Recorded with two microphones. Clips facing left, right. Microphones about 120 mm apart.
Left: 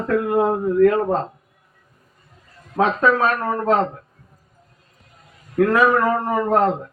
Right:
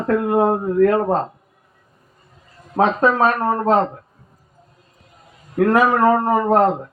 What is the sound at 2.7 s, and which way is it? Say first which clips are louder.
A man's voice: right 1 dB; 35° right (ahead or behind).